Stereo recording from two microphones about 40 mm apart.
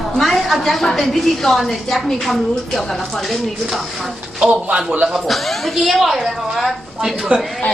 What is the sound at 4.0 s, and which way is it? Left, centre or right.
Speech, centre.